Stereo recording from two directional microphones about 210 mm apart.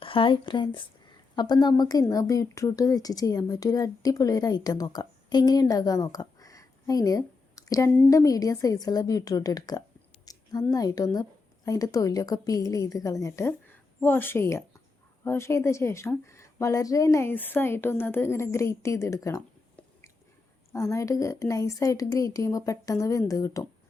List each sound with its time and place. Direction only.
0.0 s a woman's voice: 25° left (ahead or behind)